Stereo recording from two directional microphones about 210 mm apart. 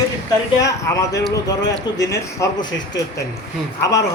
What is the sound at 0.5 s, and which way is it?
Speech, 15° left (ahead or behind).